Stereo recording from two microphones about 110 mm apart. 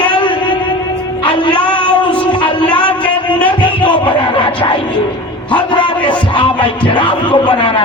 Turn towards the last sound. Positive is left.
turn(degrees=50)  # may be behind; listen again after turning